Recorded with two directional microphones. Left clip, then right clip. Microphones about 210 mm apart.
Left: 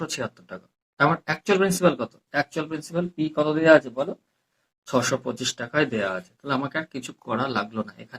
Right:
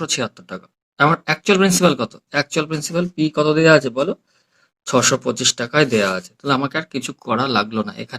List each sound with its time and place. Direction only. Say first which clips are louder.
0.0 s speech: right 8 dB; 40° right (ahead or behind)